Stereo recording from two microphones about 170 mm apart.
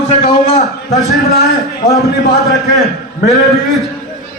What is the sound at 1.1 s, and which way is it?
A man's voice, centre (ahead or behind).